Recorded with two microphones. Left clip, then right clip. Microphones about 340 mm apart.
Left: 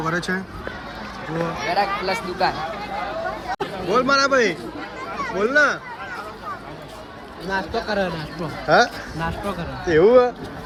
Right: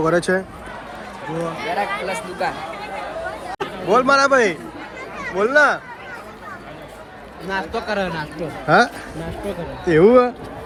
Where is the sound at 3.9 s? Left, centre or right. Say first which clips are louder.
Right 3 dB; centre.